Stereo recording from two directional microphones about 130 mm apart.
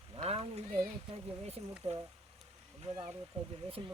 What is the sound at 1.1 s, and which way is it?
Speech, 50° right (ahead or behind).